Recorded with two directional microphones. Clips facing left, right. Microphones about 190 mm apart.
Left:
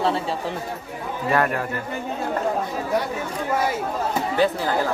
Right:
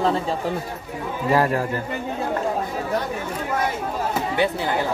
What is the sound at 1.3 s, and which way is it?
Speech, 30° right (ahead or behind).